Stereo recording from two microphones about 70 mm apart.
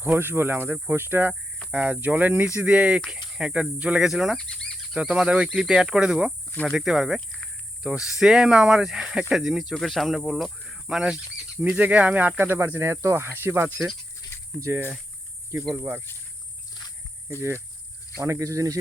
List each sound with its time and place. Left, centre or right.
0.0 s speech: right
1.7 s speech: right
4.1 s speech: centre
4.4 s cricket: centre
4.9 s speech: centre
11.6 s speech: right
13.2 s speech: right
18.2 s speech: right